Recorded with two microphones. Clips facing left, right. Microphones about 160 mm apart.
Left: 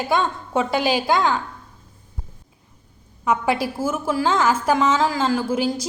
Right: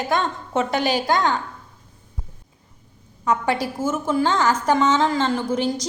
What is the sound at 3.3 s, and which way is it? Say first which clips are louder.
A woman's voice: left 1 dB; 10° left (ahead or behind).